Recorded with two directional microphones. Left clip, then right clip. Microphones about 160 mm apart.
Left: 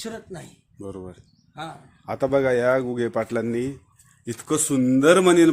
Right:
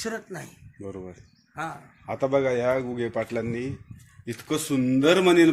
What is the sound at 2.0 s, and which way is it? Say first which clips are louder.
Speech: left 3 dB; 35° left (ahead or behind).